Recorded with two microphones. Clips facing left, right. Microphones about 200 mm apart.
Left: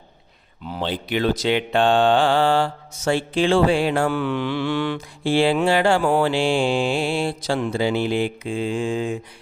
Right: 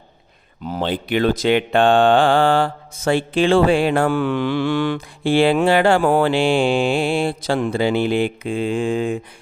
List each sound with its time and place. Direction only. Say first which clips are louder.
0.6 s speech: right 4 dB; 45° right (ahead or behind)